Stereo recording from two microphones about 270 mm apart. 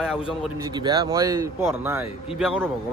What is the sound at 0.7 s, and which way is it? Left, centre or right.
Speech, centre.